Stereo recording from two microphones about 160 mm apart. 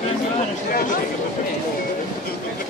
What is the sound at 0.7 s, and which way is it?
Speech, 60° left (ahead or behind).